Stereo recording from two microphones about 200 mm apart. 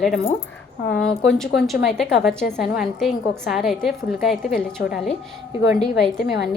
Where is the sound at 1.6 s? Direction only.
Centre (ahead or behind).